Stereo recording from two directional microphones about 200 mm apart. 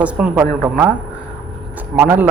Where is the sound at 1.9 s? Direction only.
10° right (ahead or behind).